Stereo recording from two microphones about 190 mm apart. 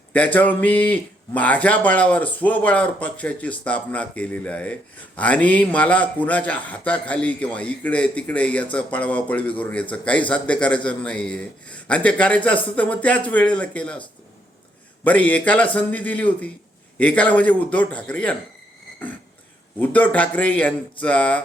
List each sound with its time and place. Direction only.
0.1 s speech: 10° left (ahead or behind)
15.0 s speech: 10° left (ahead or behind)
19.8 s speech: 10° left (ahead or behind)